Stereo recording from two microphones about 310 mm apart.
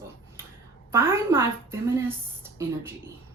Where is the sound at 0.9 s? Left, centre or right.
Centre.